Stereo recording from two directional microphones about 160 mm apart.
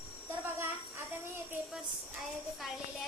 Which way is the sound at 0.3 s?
15° right (ahead or behind).